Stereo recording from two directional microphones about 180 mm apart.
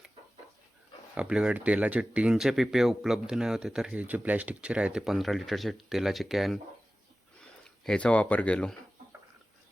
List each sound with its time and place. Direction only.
1.1 s speech: 5° right (ahead or behind)
7.9 s speech: 5° left (ahead or behind)